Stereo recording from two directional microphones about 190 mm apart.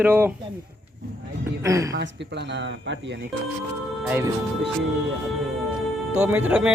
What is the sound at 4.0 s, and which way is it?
Speech, 10° right (ahead or behind).